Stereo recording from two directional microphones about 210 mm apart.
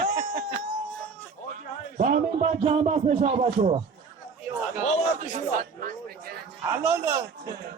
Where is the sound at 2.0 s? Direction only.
35° right (ahead or behind).